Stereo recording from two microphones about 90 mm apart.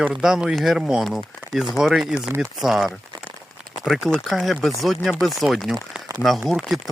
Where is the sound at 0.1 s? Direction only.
5° right (ahead or behind).